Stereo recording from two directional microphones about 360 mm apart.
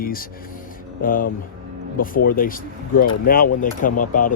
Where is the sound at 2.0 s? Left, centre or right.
Left.